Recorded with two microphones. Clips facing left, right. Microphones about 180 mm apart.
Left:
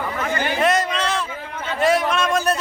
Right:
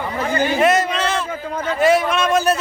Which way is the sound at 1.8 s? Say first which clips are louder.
Right 2 dB; centre (ahead or behind).